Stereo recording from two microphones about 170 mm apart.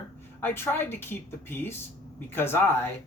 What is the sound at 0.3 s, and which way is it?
Speech, 15° left (ahead or behind).